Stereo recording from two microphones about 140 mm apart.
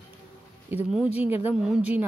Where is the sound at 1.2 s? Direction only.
15° right (ahead or behind).